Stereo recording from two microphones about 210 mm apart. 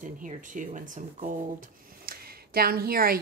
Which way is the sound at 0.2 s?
40° right (ahead or behind).